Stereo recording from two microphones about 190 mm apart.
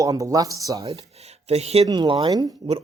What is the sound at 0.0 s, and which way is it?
Speech, 15° right (ahead or behind).